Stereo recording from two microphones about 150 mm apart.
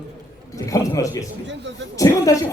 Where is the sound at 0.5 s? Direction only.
20° left (ahead or behind).